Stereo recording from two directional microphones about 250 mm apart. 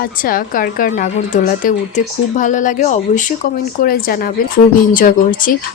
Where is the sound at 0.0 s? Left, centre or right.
Left.